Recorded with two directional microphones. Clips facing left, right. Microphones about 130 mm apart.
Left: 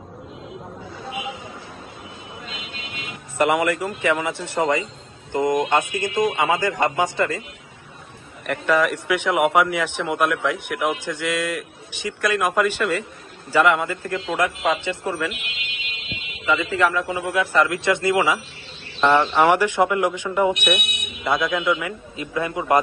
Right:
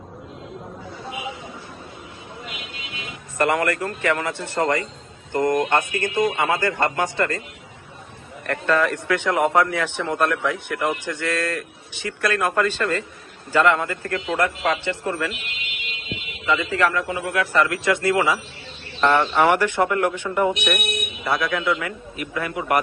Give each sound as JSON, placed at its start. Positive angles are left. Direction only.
{"t": 3.3, "sound": "a man's voice", "side_deg": 15}
{"t": 8.5, "sound": "a man's voice", "side_deg": 15}
{"t": 16.7, "sound": "a man's voice", "side_deg": 15}